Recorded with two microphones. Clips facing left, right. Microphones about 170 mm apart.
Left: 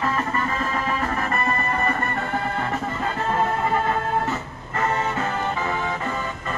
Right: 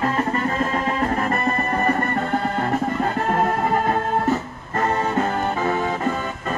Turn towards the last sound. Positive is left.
turn(degrees=-40)  # may be behind; listen again after turning